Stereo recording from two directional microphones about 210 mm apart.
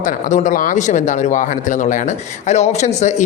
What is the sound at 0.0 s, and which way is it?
Speech, 40° left (ahead or behind).